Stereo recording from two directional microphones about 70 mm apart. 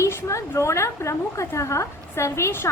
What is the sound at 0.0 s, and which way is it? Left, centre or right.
A woman's voice, left.